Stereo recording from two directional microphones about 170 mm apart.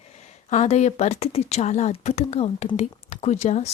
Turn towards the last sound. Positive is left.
turn(degrees=40)  # may be behind; listen again after turning